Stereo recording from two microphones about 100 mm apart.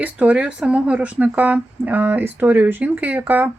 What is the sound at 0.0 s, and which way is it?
Speech, 15° right (ahead or behind).